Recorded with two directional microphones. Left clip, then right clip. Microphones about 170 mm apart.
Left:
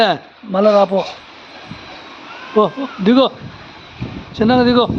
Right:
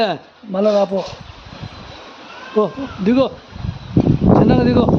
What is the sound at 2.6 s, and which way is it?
Speech, 10° left (ahead or behind).